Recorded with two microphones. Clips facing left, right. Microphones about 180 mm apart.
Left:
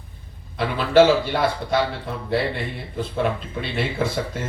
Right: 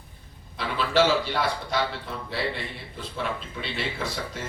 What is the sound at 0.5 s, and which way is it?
A man's voice, 55° left (ahead or behind).